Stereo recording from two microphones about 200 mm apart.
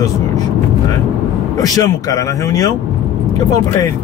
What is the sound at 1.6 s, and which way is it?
Speech, 15° left (ahead or behind).